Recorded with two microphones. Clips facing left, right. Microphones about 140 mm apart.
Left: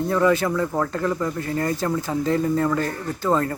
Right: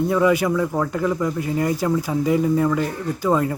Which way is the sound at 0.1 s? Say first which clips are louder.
Left 1 dB; 10° right (ahead or behind).